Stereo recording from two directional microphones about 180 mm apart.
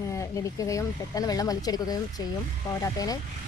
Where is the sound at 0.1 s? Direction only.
15° left (ahead or behind).